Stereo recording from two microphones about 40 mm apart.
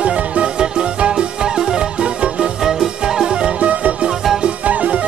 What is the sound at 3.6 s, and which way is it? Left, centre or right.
Music, right.